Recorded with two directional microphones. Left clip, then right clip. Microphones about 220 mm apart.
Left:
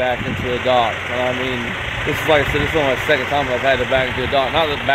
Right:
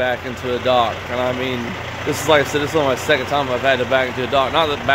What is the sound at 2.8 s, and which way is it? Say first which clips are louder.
Speech: left 1 dB; 5° right (ahead or behind).